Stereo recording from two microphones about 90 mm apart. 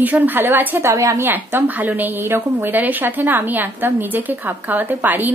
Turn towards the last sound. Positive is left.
turn(degrees=-20)  # may be behind; listen again after turning